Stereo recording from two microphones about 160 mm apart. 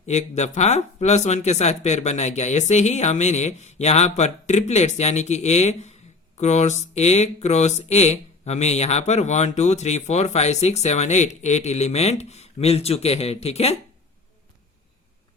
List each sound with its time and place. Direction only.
0.0 s speech: 45° left (ahead or behind)